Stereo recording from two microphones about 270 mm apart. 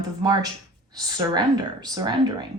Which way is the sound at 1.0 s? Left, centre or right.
Centre.